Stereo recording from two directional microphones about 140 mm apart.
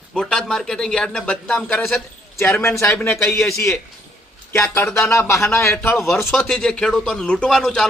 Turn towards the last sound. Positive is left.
turn(degrees=5)  # may be behind; listen again after turning